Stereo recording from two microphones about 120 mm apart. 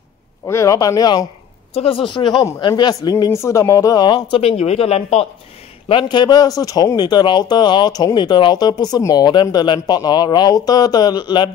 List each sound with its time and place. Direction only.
0.5 s speech: 25° left (ahead or behind)
1.7 s a woman's voice: 50° left (ahead or behind)
4.4 s speech: 60° left (ahead or behind)
5.9 s speech: 45° left (ahead or behind)